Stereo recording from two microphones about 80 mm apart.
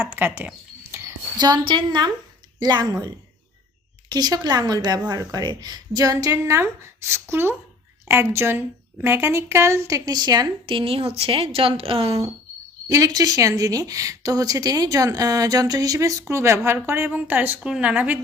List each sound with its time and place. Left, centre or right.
0.0 s a woman's voice: right
0.4 s a sound: right
1.4 s a woman's voice: right
4.1 s a woman's voice: right
6.4 s a woman's voice: right
10.2 s a woman's voice: right
11.6 s a woman's voice: right
12.9 s a woman's voice: right; by 18.2 s centre